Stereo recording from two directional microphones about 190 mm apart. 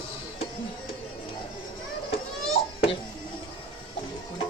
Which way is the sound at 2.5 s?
35° left (ahead or behind).